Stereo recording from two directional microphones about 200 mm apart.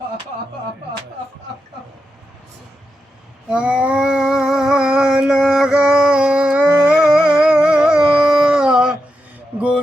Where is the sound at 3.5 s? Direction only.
5° right (ahead or behind).